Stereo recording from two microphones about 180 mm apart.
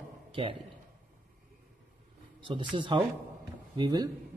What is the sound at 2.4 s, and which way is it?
Speech, 30° right (ahead or behind).